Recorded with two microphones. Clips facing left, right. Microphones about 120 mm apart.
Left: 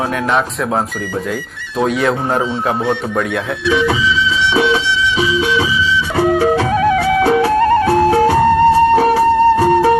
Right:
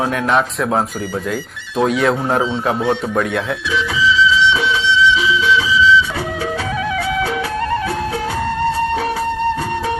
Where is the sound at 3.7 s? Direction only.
60° left (ahead or behind).